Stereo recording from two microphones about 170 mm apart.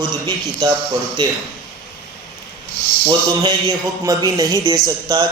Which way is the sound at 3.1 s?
25° right (ahead or behind).